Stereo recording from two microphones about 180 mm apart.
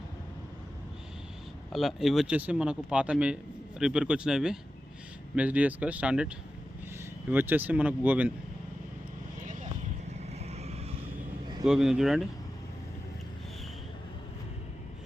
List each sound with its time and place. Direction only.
1.7 s speech: centre (ahead or behind)
10.4 s vehicle: 35° right (ahead or behind)
11.6 s speech: 5° right (ahead or behind)